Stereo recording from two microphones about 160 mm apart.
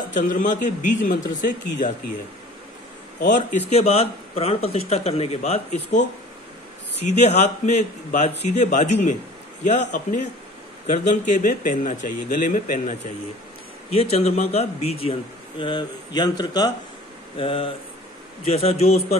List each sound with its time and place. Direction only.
0.1 s speech: 55° left (ahead or behind)
3.2 s a man's voice: 55° left (ahead or behind)
3.7 s speech: 40° left (ahead or behind); by 12.9 s 55° left (ahead or behind)
14.1 s speech: 40° left (ahead or behind)
15.6 s speech: 25° left (ahead or behind)
17.4 s speech: 35° left (ahead or behind)